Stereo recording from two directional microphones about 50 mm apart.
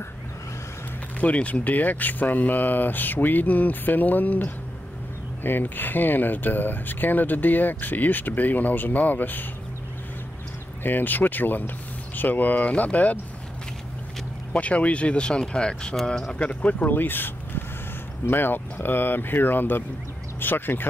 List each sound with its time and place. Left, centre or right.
1.2 s speech: left
10.8 s speech: left
14.5 s speech: left
16.3 s speech: left
16.9 s speech: left